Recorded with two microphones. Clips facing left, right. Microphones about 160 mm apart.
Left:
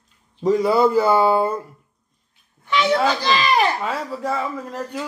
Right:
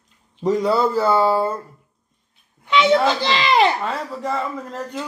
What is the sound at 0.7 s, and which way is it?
Speech, 15° left (ahead or behind).